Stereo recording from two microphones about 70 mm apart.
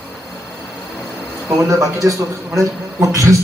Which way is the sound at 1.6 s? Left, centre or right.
Right.